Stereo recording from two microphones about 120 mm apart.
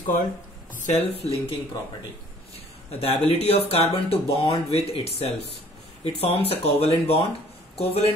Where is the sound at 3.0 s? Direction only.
60° left (ahead or behind).